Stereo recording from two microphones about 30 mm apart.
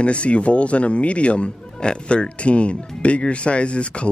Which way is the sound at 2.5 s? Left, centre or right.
Left.